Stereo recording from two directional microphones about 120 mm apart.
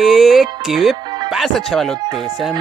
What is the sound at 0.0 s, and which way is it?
Speech, centre (ahead or behind).